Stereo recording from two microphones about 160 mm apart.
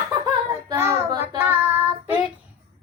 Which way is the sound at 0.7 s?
15° right (ahead or behind).